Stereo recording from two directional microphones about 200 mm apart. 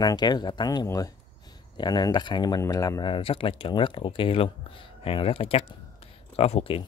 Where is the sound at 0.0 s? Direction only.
20° left (ahead or behind).